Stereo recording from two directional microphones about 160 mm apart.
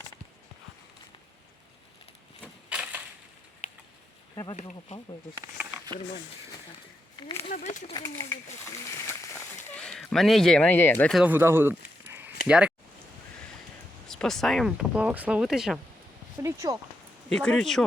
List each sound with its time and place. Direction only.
2.6 s crushing: 5° right (ahead or behind)
7.2 s speech: 30° left (ahead or behind)
7.5 s speech: 50° left (ahead or behind)
7.9 s speech: 20° left (ahead or behind)
9.7 s speech: 5° left (ahead or behind)
11.1 s speech: 10° right (ahead or behind)
12.0 s a sound: 10° right (ahead or behind)
12.5 s speech: 5° right (ahead or behind)
14.1 s speech: 5° left (ahead or behind)
16.4 s speech: 20° right (ahead or behind)
17.2 s speech: 5° left (ahead or behind)